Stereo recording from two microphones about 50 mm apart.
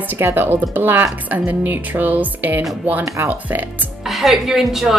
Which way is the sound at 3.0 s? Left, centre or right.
Right.